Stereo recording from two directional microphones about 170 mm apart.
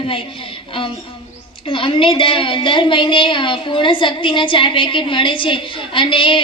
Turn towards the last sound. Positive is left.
turn(degrees=30)  # may be behind; listen again after turning